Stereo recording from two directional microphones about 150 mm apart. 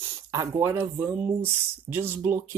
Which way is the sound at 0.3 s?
20° right (ahead or behind).